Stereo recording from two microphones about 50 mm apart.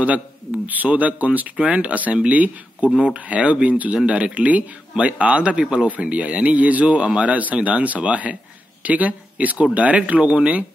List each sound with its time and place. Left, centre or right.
0.8 s speech: right